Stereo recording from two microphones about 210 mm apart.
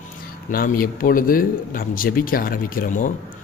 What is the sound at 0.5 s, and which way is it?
A man's voice, 45° left (ahead or behind).